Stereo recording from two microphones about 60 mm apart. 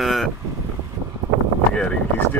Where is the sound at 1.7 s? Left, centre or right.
Centre.